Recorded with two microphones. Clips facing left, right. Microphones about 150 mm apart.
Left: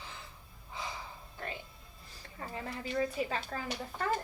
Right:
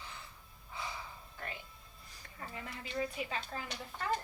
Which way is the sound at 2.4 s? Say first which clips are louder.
Left 5 dB; 35° left (ahead or behind).